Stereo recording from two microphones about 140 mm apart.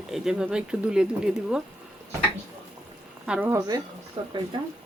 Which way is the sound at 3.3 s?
15° right (ahead or behind).